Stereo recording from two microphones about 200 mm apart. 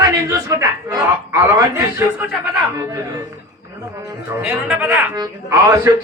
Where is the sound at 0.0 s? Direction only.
15° right (ahead or behind).